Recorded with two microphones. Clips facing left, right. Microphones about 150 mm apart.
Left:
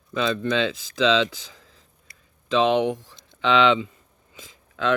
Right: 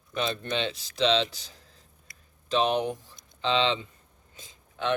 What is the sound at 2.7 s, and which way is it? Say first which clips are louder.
Speech: left 6 dB; 90° left.